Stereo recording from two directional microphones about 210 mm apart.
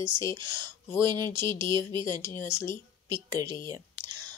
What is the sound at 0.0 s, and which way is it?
Speech, 15° left (ahead or behind).